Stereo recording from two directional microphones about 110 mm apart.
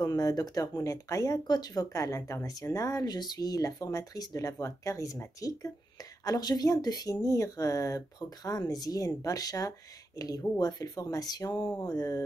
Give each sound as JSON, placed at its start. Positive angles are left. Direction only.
{"t": 0.0, "sound": "speech", "side_deg": 35}